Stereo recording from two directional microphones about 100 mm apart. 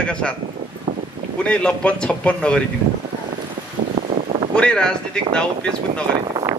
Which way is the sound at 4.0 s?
60° right (ahead or behind).